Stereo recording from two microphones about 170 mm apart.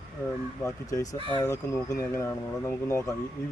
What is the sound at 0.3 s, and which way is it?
Speech, 20° left (ahead or behind).